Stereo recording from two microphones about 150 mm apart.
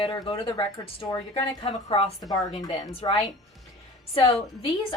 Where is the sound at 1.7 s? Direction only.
40° left (ahead or behind).